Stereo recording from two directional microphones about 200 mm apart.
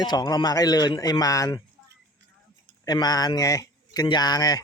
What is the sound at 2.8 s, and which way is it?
A man's voice, 20° left (ahead or behind).